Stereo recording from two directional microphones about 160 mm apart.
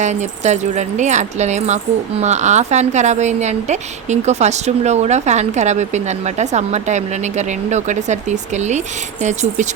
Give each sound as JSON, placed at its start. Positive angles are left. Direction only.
{"t": 0.0, "sound": "speech", "side_deg": -45}